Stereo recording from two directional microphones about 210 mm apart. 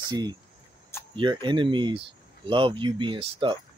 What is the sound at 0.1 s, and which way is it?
Speech, 20° right (ahead or behind).